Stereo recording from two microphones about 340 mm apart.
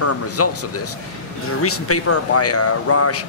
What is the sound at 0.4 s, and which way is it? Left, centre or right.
Speech, left.